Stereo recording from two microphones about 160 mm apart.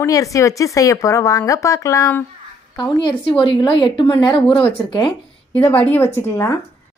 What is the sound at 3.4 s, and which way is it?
A woman's voice, 30° left (ahead or behind).